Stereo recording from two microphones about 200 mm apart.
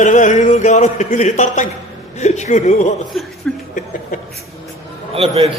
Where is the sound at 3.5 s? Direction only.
5° left (ahead or behind).